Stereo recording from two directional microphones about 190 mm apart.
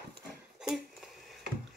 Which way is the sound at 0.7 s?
Centre (ahead or behind).